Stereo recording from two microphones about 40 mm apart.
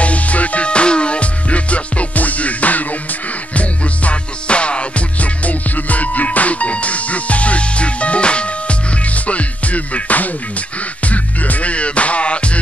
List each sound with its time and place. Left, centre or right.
0.0 s music: left